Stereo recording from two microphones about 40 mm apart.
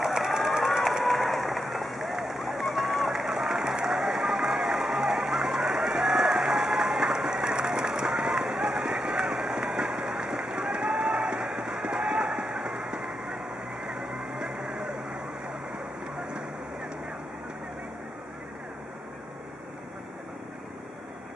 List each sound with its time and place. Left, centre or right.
0.0 s a sound: centre
1.0 s applause: centre
2.1 s run: centre
13.8 s vehicle: centre